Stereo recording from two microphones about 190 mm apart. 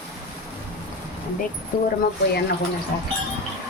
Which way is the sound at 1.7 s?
50° left (ahead or behind).